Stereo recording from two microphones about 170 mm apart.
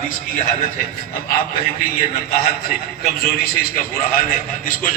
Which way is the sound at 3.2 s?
60° left (ahead or behind).